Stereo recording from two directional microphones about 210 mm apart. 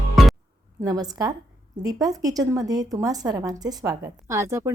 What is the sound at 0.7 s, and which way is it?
A woman's voice, 15° right (ahead or behind).